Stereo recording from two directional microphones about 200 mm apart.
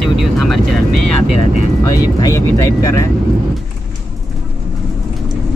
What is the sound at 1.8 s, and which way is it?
Speech, 15° left (ahead or behind).